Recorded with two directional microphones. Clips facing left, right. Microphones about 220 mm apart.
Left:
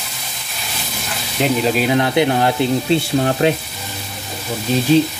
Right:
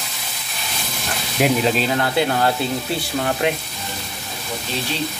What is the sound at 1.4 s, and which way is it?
Speech, 10° right (ahead or behind).